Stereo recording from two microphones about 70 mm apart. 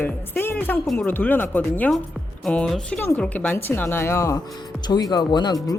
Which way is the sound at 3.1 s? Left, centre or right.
Left.